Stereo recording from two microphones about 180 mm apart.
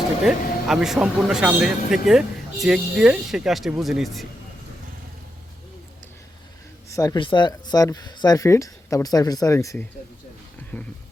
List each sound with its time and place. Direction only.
0.3 s speech: centre (ahead or behind)
6.9 s speech: 20° left (ahead or behind)
10.7 s music: 10° left (ahead or behind)